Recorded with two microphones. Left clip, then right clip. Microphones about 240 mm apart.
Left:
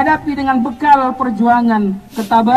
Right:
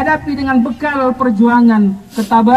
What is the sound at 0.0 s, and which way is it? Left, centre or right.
A man's voice, right.